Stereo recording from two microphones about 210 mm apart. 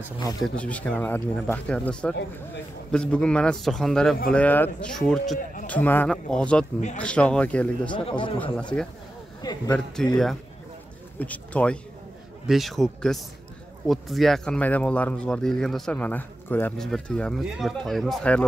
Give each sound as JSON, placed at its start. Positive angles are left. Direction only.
{"t": 0.4, "sound": "speech", "side_deg": 5}
{"t": 7.9, "sound": "speech", "side_deg": 25}
{"t": 9.4, "sound": "speech", "side_deg": 20}
{"t": 10.0, "sound": "speech", "side_deg": 5}
{"t": 11.1, "sound": "speech", "side_deg": 5}